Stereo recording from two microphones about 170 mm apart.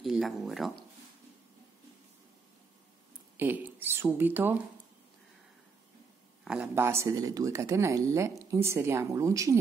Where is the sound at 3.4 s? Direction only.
10° right (ahead or behind).